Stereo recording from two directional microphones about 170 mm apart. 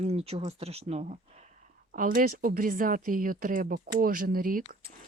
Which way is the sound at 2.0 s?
55° right (ahead or behind).